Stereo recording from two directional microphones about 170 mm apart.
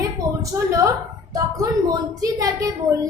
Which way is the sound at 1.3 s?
20° right (ahead or behind).